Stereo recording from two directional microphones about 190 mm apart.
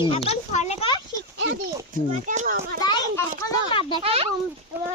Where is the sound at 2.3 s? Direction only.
40° right (ahead or behind).